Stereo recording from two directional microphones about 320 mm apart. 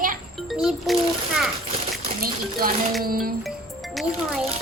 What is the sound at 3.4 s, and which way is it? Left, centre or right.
Music, centre.